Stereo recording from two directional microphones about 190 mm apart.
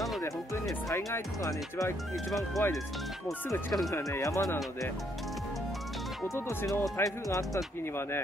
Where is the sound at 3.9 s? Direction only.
15° left (ahead or behind).